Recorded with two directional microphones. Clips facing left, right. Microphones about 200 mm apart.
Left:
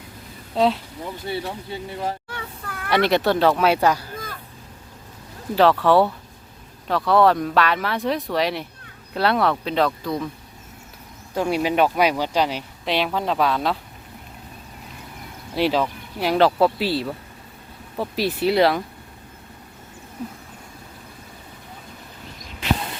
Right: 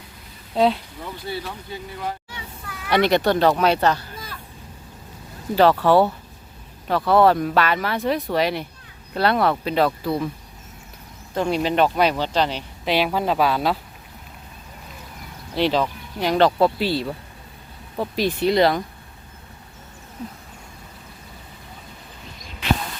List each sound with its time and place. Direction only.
0.5 s speech: centre (ahead or behind)
1.0 s speech: 20° left (ahead or behind)
2.3 s a sound: 55° left (ahead or behind)
2.9 s speech: centre (ahead or behind)
5.8 s speech: centre (ahead or behind)
11.3 s speech: 10° left (ahead or behind)
15.5 s speech: 5° left (ahead or behind)
20.2 s speech: 5° left (ahead or behind)